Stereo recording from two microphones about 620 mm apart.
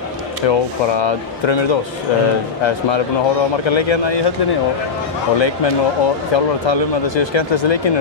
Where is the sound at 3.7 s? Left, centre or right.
Left.